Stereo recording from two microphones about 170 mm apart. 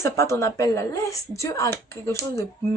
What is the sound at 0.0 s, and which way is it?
A woman's voice, 15° left (ahead or behind).